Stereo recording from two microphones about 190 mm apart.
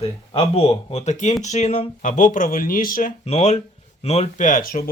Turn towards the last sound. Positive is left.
turn(degrees=45)  # may be behind; listen again after turning